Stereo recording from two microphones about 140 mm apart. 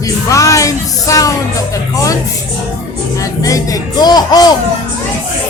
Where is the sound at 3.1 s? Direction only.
25° left (ahead or behind).